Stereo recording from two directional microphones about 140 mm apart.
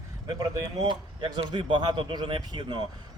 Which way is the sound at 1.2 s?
35° right (ahead or behind).